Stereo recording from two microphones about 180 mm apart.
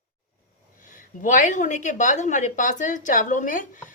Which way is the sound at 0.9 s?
45° left (ahead or behind).